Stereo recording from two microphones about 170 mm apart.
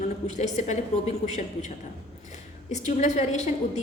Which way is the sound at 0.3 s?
45° left (ahead or behind).